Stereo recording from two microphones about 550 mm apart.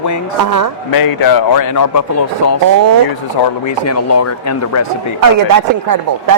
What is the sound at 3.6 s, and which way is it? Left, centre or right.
Speech, left.